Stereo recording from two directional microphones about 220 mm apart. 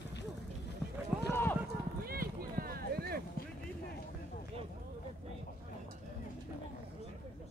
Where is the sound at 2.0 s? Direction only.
40° right (ahead or behind).